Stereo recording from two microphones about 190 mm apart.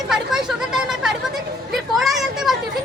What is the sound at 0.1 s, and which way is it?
Chatter, centre (ahead or behind).